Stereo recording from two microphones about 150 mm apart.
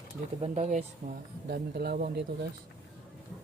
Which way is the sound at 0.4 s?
45° right (ahead or behind).